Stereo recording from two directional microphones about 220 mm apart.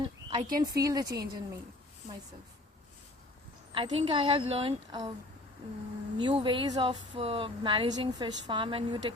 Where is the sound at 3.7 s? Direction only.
25° right (ahead or behind).